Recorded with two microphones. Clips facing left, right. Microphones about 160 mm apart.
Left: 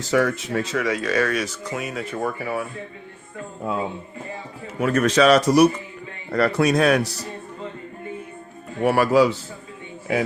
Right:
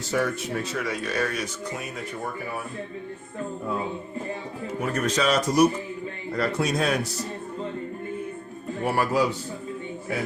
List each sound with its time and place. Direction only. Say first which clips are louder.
0.1 s speech: left 5 dB; 90° left
4.8 s a man's voice: left 8 dB; 90° left; by 7.1 s 75° left (ahead or behind)
8.8 s speech: left 7 dB; 80° left